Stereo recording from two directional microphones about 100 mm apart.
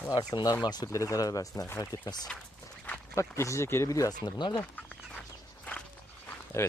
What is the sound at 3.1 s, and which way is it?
Speech, 30° left (ahead or behind).